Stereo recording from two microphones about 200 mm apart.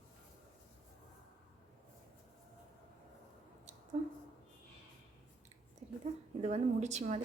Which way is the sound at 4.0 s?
35° right (ahead or behind).